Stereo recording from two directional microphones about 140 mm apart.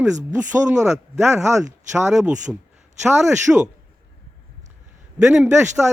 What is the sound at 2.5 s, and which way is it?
A man's voice, 5° right (ahead or behind).